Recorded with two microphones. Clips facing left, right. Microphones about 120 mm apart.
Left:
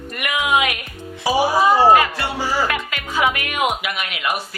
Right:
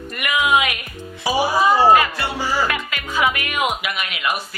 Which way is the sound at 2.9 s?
50° left (ahead or behind).